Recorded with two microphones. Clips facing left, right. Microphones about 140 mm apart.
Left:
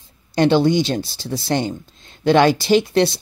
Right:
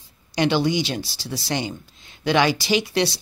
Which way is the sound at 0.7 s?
50° left (ahead or behind).